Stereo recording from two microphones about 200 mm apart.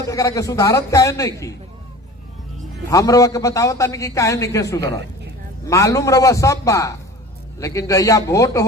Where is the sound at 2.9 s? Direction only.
15° left (ahead or behind).